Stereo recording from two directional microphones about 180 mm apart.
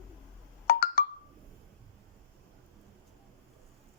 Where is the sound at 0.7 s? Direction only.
55° left (ahead or behind).